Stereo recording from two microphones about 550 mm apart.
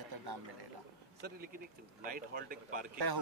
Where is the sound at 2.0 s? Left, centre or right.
Centre.